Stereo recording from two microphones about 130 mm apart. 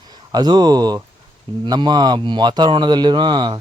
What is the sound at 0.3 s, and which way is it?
Speech, 30° right (ahead or behind).